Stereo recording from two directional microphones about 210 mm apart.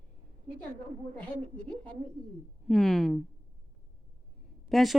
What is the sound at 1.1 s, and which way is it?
Speech, 5° left (ahead or behind).